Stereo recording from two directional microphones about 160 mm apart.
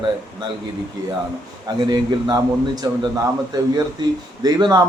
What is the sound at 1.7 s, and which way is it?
A man's voice, 25° right (ahead or behind).